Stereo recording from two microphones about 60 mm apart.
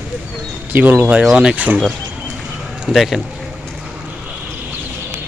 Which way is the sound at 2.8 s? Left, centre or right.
Centre.